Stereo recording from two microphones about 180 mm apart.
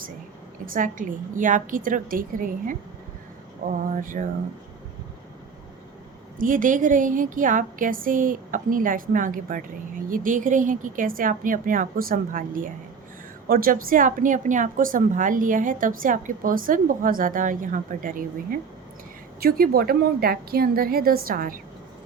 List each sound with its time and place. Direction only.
0.6 s a woman's voice: 50° right (ahead or behind)
6.4 s a woman's voice: 50° right (ahead or behind)